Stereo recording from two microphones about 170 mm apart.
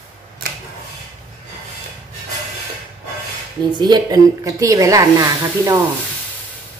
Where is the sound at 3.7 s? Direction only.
25° right (ahead or behind).